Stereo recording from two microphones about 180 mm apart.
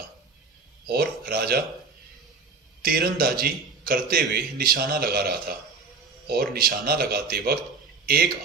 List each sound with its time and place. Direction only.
0.8 s a man's voice: 55° right (ahead or behind)
2.8 s a man's voice: 55° right (ahead or behind)